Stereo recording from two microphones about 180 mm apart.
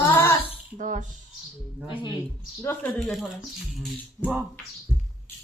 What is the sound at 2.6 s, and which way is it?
Speech, 10° left (ahead or behind).